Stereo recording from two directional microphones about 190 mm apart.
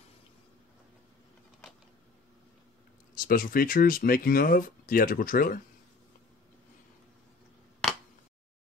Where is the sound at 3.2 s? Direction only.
50° left (ahead or behind).